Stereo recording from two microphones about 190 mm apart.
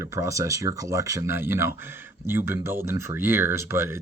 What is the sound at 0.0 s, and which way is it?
Speech, 15° right (ahead or behind).